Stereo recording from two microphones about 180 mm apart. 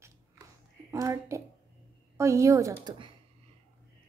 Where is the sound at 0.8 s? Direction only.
15° right (ahead or behind).